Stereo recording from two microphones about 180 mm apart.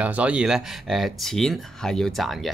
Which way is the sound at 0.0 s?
5° right (ahead or behind).